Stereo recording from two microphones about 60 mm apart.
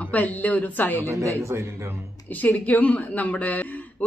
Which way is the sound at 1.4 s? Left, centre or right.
Right.